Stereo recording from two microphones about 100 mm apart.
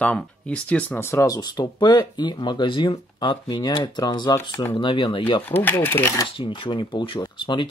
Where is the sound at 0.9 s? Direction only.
30° left (ahead or behind); by 5.4 s 55° left (ahead or behind).